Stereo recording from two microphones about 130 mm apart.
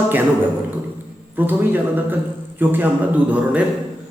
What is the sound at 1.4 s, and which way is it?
A man's voice, 15° right (ahead or behind).